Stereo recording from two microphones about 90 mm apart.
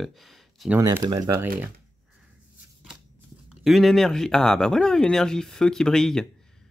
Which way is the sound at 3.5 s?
Centre (ahead or behind).